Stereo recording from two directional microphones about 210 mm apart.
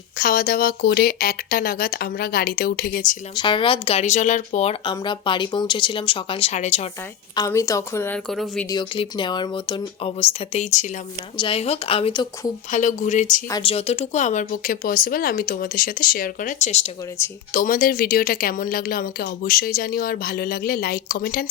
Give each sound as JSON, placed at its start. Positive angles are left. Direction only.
{"t": 0.2, "sound": "speech", "side_deg": 45}
{"t": 3.3, "sound": "speech", "side_deg": 25}
{"t": 7.3, "sound": "a woman's voice", "side_deg": 15}
{"t": 8.7, "sound": "speech", "side_deg": 20}
{"t": 12.7, "sound": "speech", "side_deg": 35}
{"t": 13.5, "sound": "speech", "side_deg": 25}